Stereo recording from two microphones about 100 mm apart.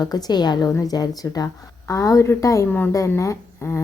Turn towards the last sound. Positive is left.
turn(degrees=25)  # may be behind; listen again after turning